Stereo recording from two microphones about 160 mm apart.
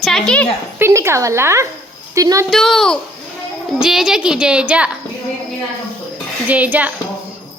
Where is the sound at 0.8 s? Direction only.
15° right (ahead or behind).